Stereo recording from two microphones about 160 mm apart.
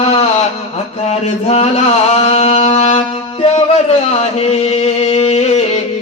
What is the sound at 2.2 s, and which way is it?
Music, 40° left (ahead or behind).